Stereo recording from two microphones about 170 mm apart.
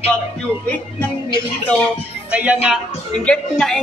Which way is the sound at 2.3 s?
10° right (ahead or behind).